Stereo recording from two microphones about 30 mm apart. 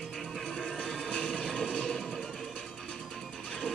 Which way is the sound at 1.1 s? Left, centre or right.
Left.